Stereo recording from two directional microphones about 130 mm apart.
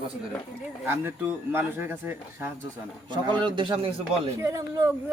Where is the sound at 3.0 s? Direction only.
35° right (ahead or behind).